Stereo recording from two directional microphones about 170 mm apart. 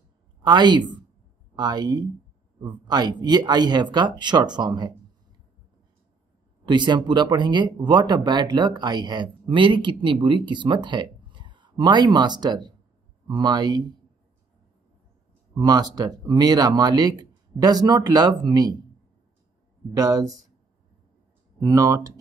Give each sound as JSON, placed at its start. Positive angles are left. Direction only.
{"t": 0.4, "sound": "a woman's voice", "side_deg": -25}
{"t": 6.6, "sound": "speech", "side_deg": -25}
{"t": 15.5, "sound": "speech", "side_deg": -20}
{"t": 19.9, "sound": "speech", "side_deg": -20}
{"t": 21.5, "sound": "speech", "side_deg": -20}